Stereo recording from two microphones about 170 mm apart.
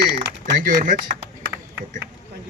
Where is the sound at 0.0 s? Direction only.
80° right.